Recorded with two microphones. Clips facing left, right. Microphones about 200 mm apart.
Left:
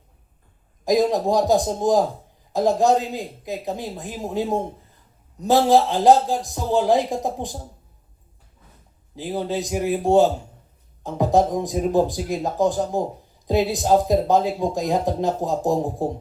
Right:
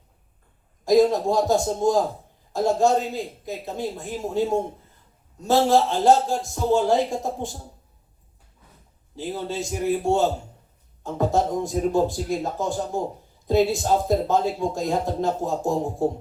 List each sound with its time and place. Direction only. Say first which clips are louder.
0.9 s a man's voice: right 1 dB; 15° left (ahead or behind)
5.4 s a man's voice: left 2 dB; 15° left (ahead or behind)
9.1 s a man's voice: left 3 dB; 15° left (ahead or behind)